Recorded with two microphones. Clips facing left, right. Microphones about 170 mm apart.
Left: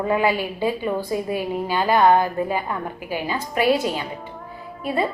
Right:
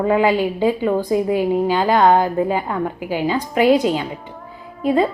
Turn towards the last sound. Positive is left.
turn(degrees=-20)  # may be behind; listen again after turning